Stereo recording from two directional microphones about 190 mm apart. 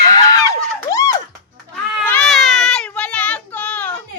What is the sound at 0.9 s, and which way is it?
Music, 15° left (ahead or behind).